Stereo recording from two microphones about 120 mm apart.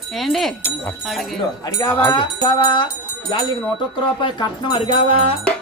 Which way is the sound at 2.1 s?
40° left (ahead or behind).